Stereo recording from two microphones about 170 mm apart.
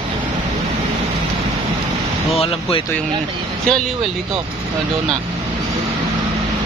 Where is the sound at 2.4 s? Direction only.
35° left (ahead or behind).